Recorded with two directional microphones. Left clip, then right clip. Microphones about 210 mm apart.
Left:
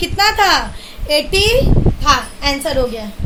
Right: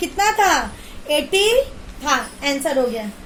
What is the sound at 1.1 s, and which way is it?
A woman's voice, 10° right (ahead or behind).